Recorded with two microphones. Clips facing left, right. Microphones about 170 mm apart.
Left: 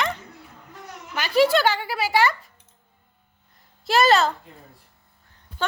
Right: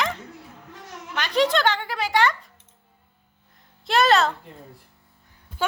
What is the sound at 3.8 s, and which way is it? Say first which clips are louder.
Speech: left 1 dB; centre (ahead or behind).